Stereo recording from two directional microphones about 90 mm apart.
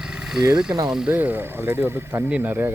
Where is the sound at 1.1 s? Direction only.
20° right (ahead or behind).